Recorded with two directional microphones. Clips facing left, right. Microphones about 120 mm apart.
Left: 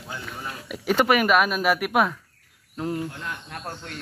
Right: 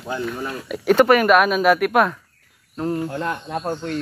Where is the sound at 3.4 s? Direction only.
25° right (ahead or behind).